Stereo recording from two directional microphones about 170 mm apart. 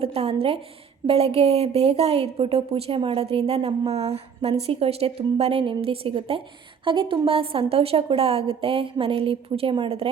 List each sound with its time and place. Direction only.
0.0 s a woman's voice: 35° right (ahead or behind)